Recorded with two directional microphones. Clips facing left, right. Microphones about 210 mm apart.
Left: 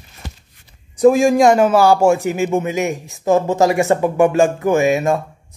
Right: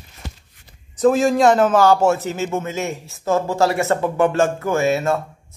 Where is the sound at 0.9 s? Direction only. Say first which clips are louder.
Left 4 dB; 10° left (ahead or behind).